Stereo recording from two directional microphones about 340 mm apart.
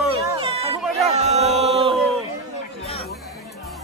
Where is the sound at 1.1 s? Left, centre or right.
Centre.